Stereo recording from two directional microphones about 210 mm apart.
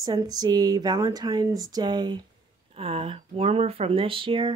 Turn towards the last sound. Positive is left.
turn(degrees=-25)  # may be behind; listen again after turning